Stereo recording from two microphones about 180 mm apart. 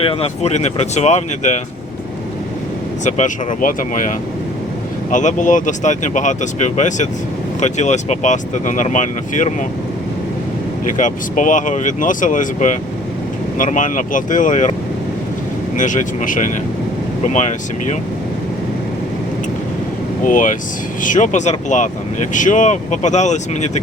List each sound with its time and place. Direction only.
0.0 s speech: 30° left (ahead or behind)
3.0 s speech: 40° left (ahead or behind)
5.1 s speech: 45° left (ahead or behind)
10.9 s speech: 45° left (ahead or behind)
20.2 s speech: 45° left (ahead or behind)